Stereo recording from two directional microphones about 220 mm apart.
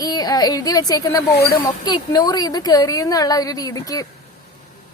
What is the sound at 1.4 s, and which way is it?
Speech, 45° left (ahead or behind).